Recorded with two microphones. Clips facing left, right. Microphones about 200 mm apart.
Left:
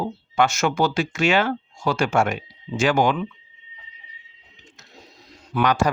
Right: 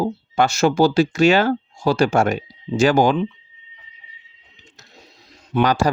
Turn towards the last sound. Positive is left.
turn(degrees=-35)  # may be behind; listen again after turning